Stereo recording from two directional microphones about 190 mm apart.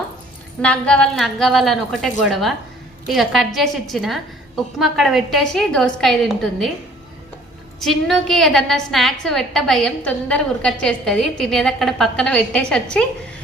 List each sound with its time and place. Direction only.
0.6 s a woman's voice: 5° left (ahead or behind)
7.8 s a woman's voice: centre (ahead or behind)